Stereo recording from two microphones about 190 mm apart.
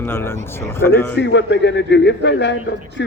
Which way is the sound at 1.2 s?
70° left (ahead or behind).